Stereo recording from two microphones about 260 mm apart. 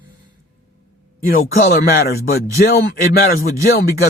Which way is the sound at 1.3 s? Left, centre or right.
Left.